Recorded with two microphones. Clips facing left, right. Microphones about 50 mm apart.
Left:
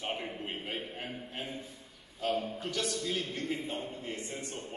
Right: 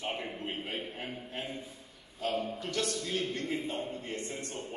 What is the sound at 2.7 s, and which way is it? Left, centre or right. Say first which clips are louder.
A man's voice: even; right.